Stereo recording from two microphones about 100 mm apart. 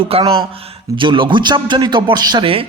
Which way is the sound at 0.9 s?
55° right (ahead or behind).